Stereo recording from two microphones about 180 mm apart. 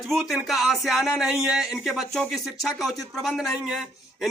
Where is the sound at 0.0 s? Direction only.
Centre (ahead or behind).